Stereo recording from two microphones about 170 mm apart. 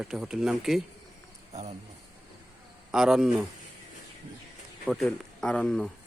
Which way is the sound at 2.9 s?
5° right (ahead or behind).